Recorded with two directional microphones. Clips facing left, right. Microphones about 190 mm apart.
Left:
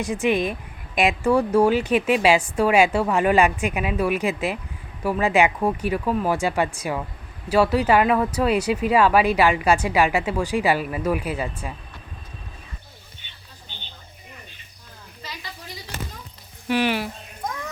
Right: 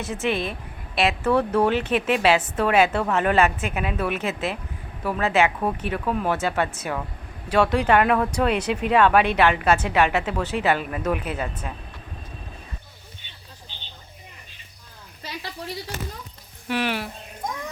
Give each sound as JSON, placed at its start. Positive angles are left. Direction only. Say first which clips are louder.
{"t": 0.0, "sound": "speech", "louder": "left 4 dB", "side_deg": 15}
{"t": 15.2, "sound": "a sound", "louder": "right 5 dB", "side_deg": -60}
{"t": 16.6, "sound": "speech", "louder": "left 4 dB", "side_deg": 0}